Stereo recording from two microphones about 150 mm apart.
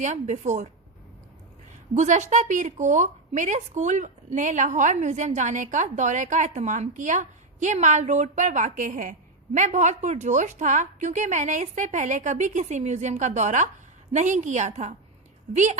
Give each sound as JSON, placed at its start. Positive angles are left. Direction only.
{"t": 0.0, "sound": "speech", "side_deg": -50}
{"t": 2.0, "sound": "speech", "side_deg": -50}